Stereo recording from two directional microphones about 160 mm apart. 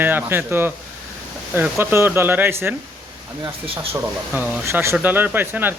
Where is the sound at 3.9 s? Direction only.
10° right (ahead or behind).